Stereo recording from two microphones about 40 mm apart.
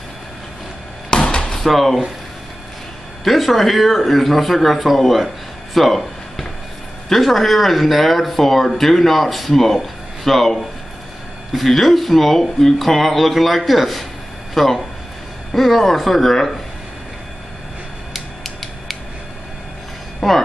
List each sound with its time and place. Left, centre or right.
1.1 s chop: centre
1.6 s speech: centre
3.3 s speech: centre
5.8 s a sound: centre
7.1 s speech: centre
18.1 s creak: centre
20.2 s a sound: centre